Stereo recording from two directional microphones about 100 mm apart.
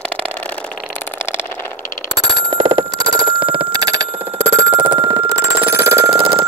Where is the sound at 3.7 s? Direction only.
40° right (ahead or behind).